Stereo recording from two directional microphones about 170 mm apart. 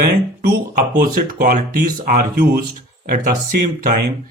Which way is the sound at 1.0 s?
60° right (ahead or behind).